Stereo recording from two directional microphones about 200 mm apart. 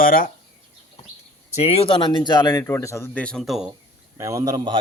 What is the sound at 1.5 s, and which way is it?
Speech, 30° left (ahead or behind).